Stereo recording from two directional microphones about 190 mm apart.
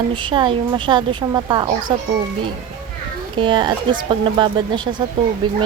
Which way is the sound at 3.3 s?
25° right (ahead or behind).